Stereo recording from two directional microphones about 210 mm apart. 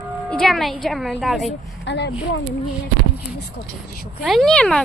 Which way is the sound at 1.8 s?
55° left (ahead or behind).